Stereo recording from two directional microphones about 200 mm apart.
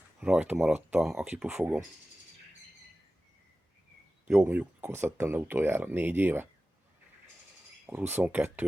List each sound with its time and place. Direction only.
0.2 s speech: 5° right (ahead or behind)
4.3 s speech: 10° right (ahead or behind)
7.9 s speech: 10° right (ahead or behind)